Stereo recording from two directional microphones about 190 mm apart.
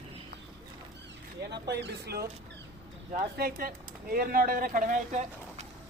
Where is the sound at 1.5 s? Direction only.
60° right (ahead or behind).